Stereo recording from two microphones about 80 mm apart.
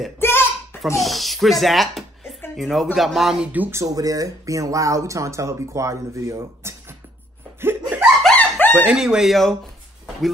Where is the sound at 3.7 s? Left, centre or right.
Right.